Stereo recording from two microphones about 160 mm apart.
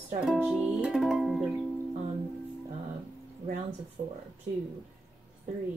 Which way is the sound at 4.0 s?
50° right (ahead or behind).